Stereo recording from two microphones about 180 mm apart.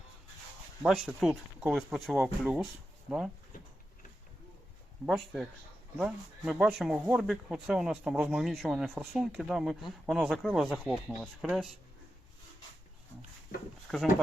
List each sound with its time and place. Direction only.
0.8 s speech: centre (ahead or behind)
5.0 s speech: centre (ahead or behind)
13.9 s speech: centre (ahead or behind)